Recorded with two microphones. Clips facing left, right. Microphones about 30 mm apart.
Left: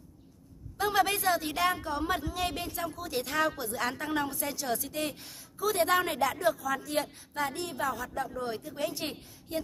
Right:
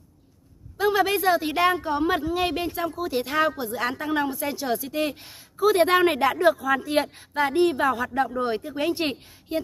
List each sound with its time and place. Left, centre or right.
0.7 s speech: centre; by 9.3 s right